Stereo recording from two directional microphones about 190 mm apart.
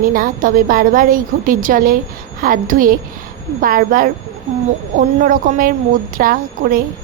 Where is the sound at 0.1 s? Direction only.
45° right (ahead or behind).